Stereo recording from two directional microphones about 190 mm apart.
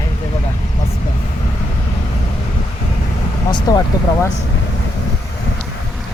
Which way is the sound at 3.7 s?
20° left (ahead or behind).